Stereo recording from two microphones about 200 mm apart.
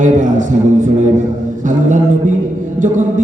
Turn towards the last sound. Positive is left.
turn(degrees=-40)  # may be behind; listen again after turning